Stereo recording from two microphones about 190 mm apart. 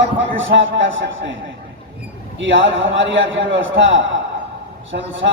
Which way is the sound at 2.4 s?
80° right.